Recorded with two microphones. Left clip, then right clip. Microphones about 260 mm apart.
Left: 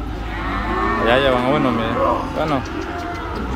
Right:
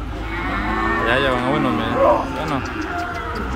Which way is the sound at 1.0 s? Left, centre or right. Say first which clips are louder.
Left 5 dB; centre.